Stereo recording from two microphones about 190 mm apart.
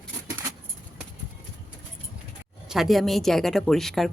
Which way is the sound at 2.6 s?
Centre (ahead or behind).